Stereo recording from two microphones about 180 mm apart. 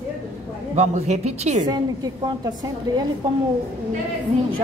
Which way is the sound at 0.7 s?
40° right (ahead or behind).